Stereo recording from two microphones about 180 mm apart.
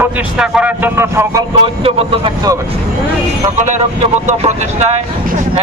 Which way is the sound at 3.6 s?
40° right (ahead or behind).